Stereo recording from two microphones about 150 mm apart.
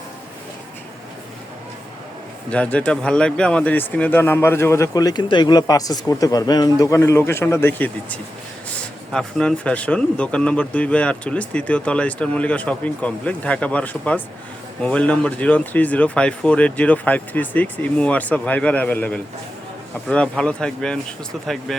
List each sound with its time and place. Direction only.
2.5 s speech: 10° left (ahead or behind)